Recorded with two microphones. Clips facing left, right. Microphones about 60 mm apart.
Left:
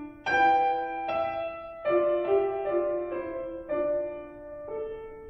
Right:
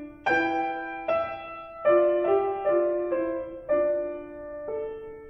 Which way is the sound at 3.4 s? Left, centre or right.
Centre.